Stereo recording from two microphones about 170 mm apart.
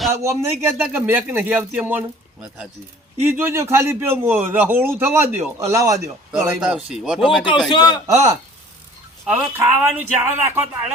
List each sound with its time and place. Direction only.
0.1 s speech: 15° right (ahead or behind)
6.6 s speech: 5° right (ahead or behind)
7.7 s a man's voice: 25° left (ahead or behind)
8.0 s speech: 20° right (ahead or behind)
9.2 s speech: 5° right (ahead or behind)